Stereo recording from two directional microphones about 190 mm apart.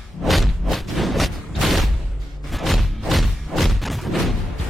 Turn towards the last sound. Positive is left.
turn(degrees=0)  # may be behind; listen again after turning